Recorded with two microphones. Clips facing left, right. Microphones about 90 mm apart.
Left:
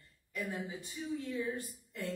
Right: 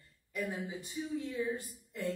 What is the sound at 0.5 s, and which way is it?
Speech, centre (ahead or behind).